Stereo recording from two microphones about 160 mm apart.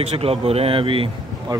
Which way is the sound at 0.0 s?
40° right (ahead or behind).